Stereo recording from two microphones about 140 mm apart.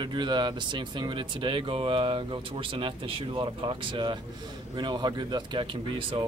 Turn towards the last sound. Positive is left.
turn(degrees=-35)  # may be behind; listen again after turning